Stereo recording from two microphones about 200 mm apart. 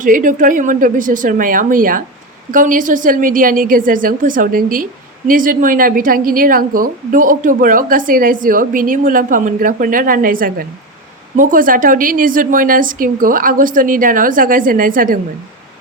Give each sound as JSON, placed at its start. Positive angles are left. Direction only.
{"t": 0.0, "sound": "a woman's voice", "side_deg": -40}